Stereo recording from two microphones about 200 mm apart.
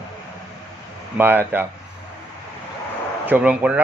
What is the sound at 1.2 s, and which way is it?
Speech, 10° right (ahead or behind).